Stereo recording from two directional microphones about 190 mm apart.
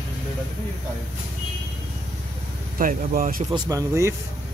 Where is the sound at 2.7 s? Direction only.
45° right (ahead or behind).